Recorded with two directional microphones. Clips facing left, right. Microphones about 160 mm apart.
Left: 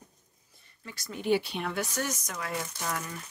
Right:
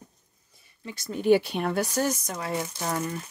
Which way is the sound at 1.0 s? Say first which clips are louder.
Right 7 dB; 45° right (ahead or behind).